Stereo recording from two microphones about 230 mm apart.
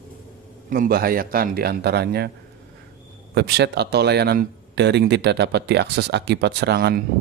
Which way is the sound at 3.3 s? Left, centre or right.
Right.